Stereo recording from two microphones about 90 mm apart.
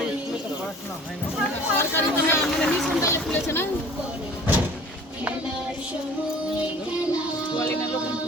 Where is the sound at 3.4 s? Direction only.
25° left (ahead or behind).